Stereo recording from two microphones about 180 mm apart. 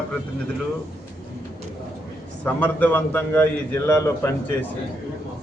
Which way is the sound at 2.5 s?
10° left (ahead or behind).